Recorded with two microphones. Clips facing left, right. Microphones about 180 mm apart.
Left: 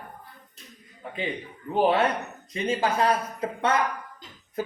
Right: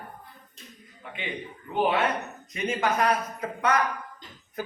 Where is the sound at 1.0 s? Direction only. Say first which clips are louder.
Left 5 dB; 35° left (ahead or behind).